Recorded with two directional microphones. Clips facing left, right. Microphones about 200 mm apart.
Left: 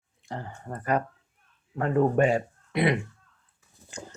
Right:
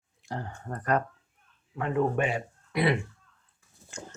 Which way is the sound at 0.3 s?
Centre (ahead or behind).